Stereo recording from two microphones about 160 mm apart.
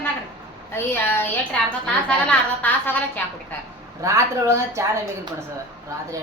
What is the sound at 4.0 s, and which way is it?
A woman's voice, 15° right (ahead or behind).